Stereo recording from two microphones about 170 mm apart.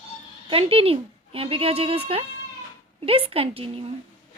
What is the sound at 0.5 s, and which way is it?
A woman's voice, 35° right (ahead or behind).